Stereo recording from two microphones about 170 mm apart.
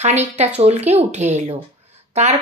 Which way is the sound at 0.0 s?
40° right (ahead or behind).